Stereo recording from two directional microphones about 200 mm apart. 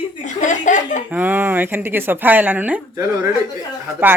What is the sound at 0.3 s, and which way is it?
Chuckle, 40° left (ahead or behind).